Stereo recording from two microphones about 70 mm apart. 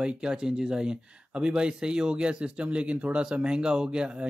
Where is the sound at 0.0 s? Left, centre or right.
Centre.